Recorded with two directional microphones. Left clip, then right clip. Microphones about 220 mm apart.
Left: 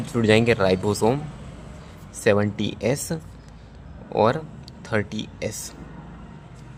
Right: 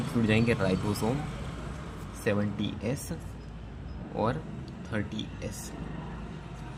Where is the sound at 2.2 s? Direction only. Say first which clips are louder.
Left 10 dB; 40° left (ahead or behind).